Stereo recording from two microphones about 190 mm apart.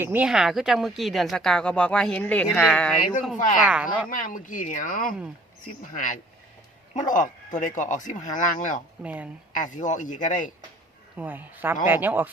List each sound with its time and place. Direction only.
0.0 s speech: 10° right (ahead or behind)
3.6 s speech: 5° right (ahead or behind)
4.1 s a man's voice: 45° left (ahead or behind)
9.0 s speech: 5° right (ahead or behind)
9.5 s a man's voice: 45° left (ahead or behind)
11.2 s speech: 10° right (ahead or behind)